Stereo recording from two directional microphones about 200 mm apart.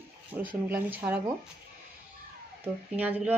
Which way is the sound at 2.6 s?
10° right (ahead or behind).